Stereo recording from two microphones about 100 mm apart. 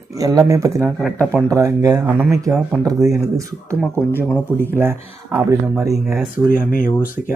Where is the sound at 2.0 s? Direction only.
15° right (ahead or behind).